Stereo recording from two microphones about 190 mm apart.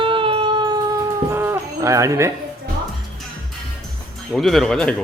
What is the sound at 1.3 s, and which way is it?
Livestock, 10° right (ahead or behind).